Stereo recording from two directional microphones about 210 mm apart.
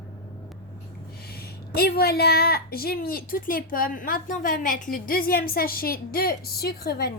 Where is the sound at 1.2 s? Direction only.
50° left (ahead or behind).